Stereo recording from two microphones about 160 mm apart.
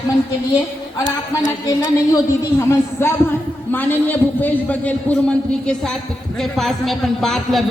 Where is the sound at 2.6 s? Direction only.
15° left (ahead or behind).